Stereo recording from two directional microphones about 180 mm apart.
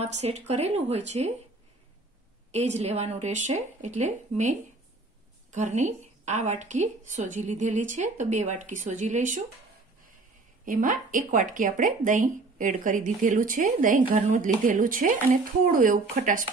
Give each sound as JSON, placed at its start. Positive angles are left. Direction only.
{"t": 0.0, "sound": "a woman's voice", "side_deg": -35}
{"t": 2.5, "sound": "a woman's voice", "side_deg": -35}
{"t": 10.6, "sound": "a woman's voice", "side_deg": -50}